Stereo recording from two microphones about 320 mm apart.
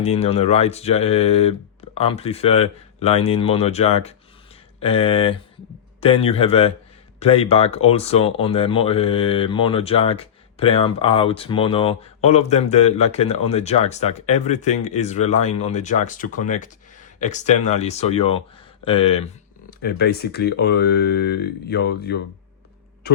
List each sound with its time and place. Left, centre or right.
0.0 s speech: centre
19.8 s speech: left